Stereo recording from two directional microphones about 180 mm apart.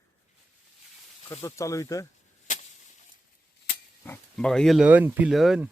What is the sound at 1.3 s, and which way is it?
Speech, 15° left (ahead or behind).